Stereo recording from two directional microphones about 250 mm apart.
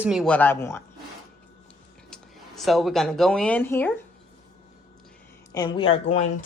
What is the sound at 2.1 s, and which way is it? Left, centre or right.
A woman's voice, centre.